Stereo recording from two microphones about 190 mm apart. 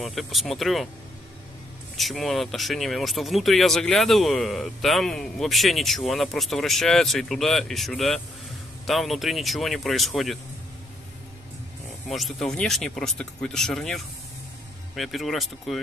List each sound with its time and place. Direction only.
0.0 s speech: centre (ahead or behind)
2.0 s speech: centre (ahead or behind)
12.1 s speech: centre (ahead or behind)